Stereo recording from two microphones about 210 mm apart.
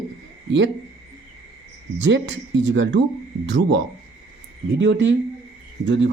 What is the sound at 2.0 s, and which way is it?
Speech, 60° right (ahead or behind).